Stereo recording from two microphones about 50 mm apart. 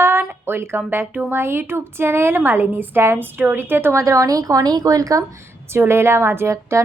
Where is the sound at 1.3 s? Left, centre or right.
Right.